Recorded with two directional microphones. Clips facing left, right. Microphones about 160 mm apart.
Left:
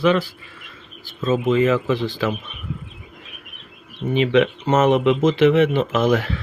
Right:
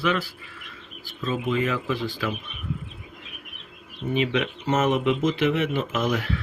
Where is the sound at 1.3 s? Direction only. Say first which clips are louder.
Left 8 dB; 85° left.